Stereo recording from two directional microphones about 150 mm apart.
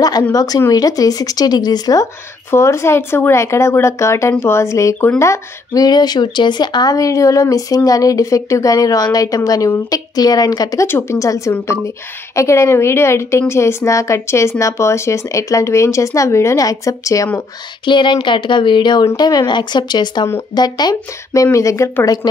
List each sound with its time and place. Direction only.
0.3 s speech: 25° left (ahead or behind)
17.8 s speech: 30° left (ahead or behind)